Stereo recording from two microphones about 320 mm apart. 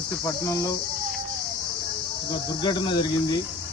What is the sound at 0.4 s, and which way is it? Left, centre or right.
Speech, centre.